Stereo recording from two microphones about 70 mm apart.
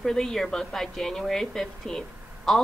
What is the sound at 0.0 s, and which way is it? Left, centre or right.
A woman's voice, centre.